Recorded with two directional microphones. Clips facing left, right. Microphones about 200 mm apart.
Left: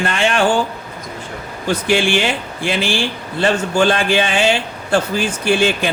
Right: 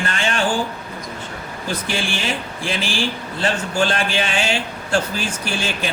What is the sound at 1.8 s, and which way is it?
A man's voice, 70° left (ahead or behind).